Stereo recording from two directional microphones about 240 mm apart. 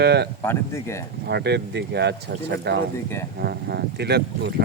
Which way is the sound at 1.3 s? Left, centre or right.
Right.